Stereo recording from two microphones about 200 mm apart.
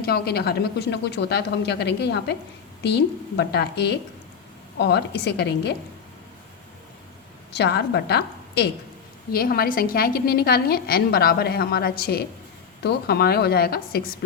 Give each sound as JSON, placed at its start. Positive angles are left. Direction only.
{"t": 0.0, "sound": "speech", "side_deg": 50}
{"t": 7.5, "sound": "a woman's voice", "side_deg": 55}